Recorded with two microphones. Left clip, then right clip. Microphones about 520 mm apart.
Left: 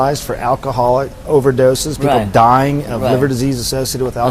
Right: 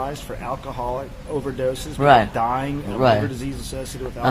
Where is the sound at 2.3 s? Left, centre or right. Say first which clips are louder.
Left 13 dB; left.